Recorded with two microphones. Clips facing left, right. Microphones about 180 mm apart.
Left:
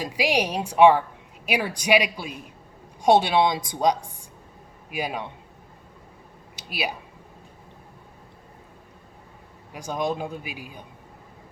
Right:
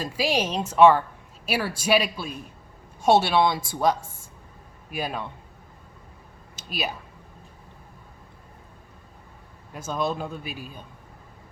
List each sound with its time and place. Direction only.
0.0 s a woman's voice: 15° left (ahead or behind)
6.6 s speech: 15° left (ahead or behind)
9.7 s a woman's voice: 15° left (ahead or behind)